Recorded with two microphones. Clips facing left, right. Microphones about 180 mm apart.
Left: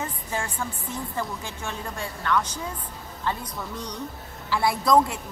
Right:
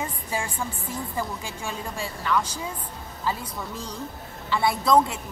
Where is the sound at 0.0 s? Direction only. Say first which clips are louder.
Right 1 dB; 10° right (ahead or behind).